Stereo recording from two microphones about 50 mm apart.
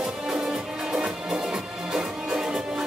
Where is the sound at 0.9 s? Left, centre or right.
Centre.